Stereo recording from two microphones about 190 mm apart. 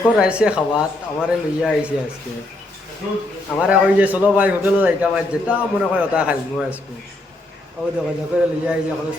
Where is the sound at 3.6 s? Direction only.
5° right (ahead or behind).